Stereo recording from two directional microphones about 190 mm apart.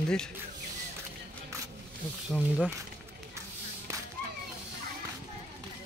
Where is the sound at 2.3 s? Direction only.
5° left (ahead or behind).